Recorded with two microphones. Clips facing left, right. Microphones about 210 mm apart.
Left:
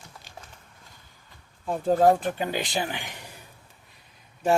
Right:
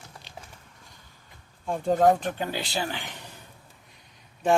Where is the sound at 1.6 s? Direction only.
5° left (ahead or behind).